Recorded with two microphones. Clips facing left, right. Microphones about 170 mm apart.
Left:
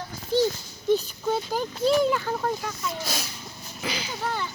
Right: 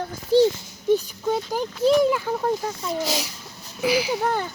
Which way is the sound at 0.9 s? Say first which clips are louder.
Right 2 dB; 15° right (ahead or behind).